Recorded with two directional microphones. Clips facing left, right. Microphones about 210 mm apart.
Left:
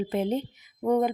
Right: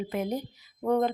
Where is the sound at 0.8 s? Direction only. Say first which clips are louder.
Left 2 dB; 15° left (ahead or behind).